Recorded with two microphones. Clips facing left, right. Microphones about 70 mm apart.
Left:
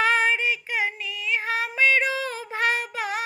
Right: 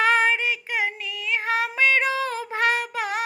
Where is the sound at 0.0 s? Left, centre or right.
Right.